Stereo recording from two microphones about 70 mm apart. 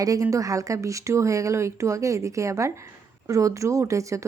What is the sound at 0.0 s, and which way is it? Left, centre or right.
Speech, right.